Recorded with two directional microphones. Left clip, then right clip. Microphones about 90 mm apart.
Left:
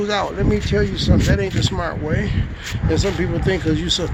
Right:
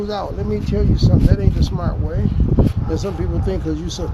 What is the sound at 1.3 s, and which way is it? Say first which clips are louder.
Speech: left 3 dB; 15° left (ahead or behind).